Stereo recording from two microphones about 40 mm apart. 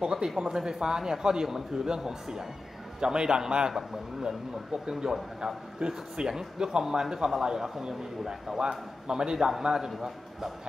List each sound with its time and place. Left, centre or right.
0.0 s a man's voice: centre
4.8 s a man's voice: centre